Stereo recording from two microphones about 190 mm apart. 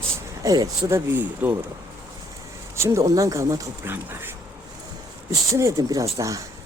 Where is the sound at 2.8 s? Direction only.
15° right (ahead or behind).